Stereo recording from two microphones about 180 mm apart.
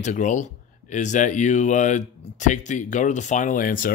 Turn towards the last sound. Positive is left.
turn(degrees=50)  # may be behind; listen again after turning